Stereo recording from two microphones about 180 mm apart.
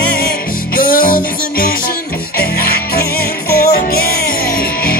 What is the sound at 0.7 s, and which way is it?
Music, 50° left (ahead or behind).